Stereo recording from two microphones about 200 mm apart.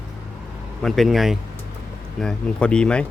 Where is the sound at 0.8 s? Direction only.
Centre (ahead or behind).